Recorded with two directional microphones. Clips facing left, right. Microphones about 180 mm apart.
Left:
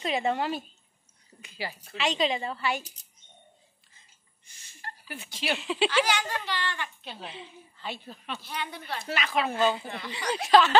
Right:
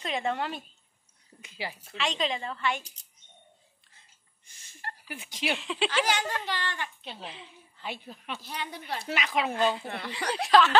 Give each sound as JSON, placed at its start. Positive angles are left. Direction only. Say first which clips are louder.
{"t": 0.0, "sound": "a woman's voice", "louder": "left 3 dB", "side_deg": 5}
{"t": 1.4, "sound": "speech", "louder": "left 1 dB", "side_deg": -20}
{"t": 2.0, "sound": "a woman's voice", "louder": "left 3 dB", "side_deg": 5}
{"t": 5.0, "sound": "a woman's voice", "louder": "right 2 dB", "side_deg": -15}
{"t": 5.5, "sound": "a woman's voice", "louder": "left 3 dB", "side_deg": 5}
{"t": 6.0, "sound": "speech", "louder": "even", "side_deg": -45}
{"t": 7.2, "sound": "a woman's voice", "louder": "left 2 dB", "side_deg": 0}
{"t": 7.8, "sound": "a woman's voice", "louder": "even", "side_deg": -15}
{"t": 9.5, "sound": "a woman's voice", "louder": "left 2 dB", "side_deg": 0}
{"t": 9.8, "sound": "speech", "louder": "right 1 dB", "side_deg": -60}
{"t": 10.4, "sound": "a woman's voice", "louder": "left 1 dB", "side_deg": 0}